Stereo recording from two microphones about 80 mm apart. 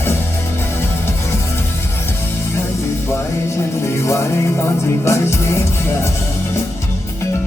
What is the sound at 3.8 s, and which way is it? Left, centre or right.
Music, left.